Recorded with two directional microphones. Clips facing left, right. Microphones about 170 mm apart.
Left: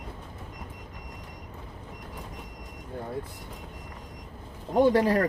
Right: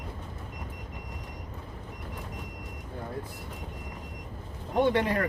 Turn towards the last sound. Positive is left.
turn(degrees=35)  # may be behind; listen again after turning